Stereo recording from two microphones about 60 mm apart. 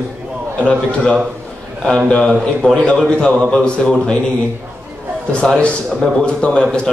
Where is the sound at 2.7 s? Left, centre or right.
Centre.